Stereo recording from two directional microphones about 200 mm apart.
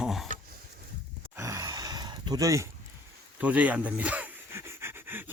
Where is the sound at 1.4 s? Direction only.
15° right (ahead or behind).